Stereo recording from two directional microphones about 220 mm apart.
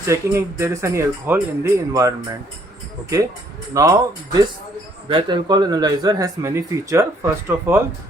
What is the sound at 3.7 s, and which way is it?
Speech, 15° right (ahead or behind).